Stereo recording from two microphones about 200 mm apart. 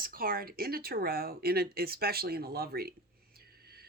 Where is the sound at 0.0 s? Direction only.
45° right (ahead or behind).